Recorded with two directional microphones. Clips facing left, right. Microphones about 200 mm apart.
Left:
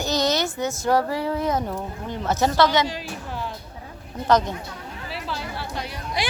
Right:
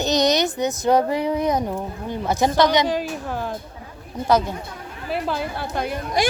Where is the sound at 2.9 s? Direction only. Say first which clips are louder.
Right 8 dB; 50° right (ahead or behind).